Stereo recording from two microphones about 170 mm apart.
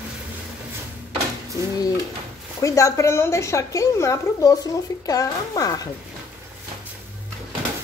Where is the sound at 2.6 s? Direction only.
20° left (ahead or behind).